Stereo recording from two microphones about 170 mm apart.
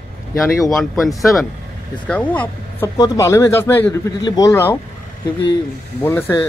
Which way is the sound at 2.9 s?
20° left (ahead or behind).